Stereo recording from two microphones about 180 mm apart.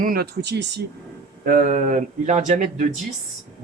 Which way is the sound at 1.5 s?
50° right (ahead or behind).